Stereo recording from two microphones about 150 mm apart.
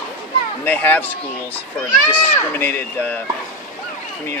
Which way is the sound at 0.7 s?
10° left (ahead or behind).